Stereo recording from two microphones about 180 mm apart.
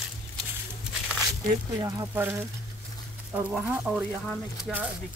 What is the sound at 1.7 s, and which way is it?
Speech, 15° right (ahead or behind).